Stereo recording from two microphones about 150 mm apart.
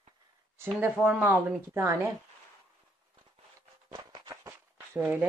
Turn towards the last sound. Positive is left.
turn(degrees=-10)  # may be behind; listen again after turning